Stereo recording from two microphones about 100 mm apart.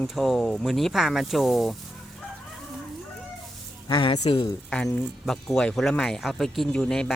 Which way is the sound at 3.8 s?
55° left (ahead or behind).